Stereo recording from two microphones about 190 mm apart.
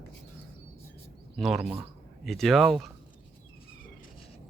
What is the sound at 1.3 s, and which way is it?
Speech, centre (ahead or behind).